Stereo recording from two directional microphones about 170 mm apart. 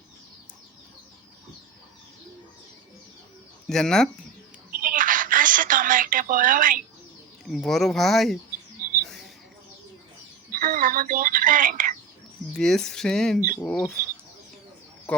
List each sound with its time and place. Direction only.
3.7 s speech: 5° left (ahead or behind)
4.7 s a sound: 55° right (ahead or behind)
7.4 s speech: 5° left (ahead or behind)
9.0 s mouse: centre (ahead or behind)
10.5 s speech: 55° right (ahead or behind)
12.5 s speech: 5° left (ahead or behind)